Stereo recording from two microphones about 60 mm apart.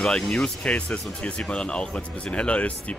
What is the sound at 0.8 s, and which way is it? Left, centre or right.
Speech, centre.